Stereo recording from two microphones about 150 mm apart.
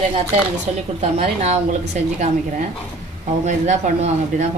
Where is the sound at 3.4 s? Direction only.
55° right (ahead or behind).